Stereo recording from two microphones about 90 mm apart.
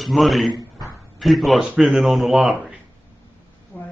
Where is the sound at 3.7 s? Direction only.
20° left (ahead or behind).